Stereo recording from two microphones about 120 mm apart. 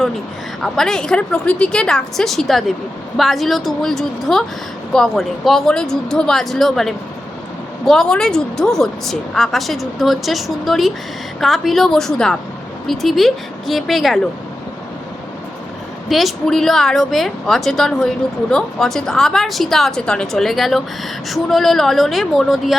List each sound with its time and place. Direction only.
0.6 s a woman's voice: 5° left (ahead or behind)
16.0 s a woman's voice: centre (ahead or behind)